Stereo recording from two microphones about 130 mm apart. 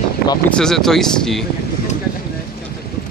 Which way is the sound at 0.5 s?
5° left (ahead or behind).